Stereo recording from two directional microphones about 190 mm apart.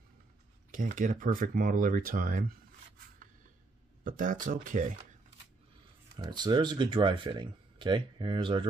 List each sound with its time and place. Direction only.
0.7 s speech: 45° right (ahead or behind)
4.0 s speech: 45° right (ahead or behind)
6.1 s speech: 20° right (ahead or behind)